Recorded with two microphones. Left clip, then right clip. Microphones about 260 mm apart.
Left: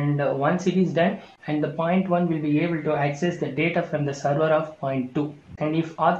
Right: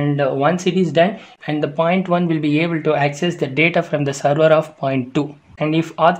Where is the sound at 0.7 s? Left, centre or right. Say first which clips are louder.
Right 7 dB; right.